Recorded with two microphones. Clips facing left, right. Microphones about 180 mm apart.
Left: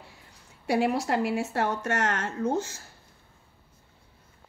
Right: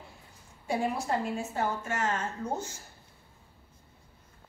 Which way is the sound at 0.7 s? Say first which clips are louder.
Left 5 dB; 75° left (ahead or behind).